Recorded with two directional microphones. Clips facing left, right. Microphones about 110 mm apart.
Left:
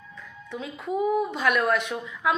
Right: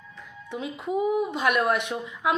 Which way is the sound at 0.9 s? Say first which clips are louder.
Even; 10° right (ahead or behind).